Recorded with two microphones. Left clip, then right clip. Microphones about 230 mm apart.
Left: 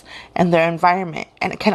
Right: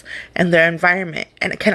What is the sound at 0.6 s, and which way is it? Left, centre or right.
Speech, left.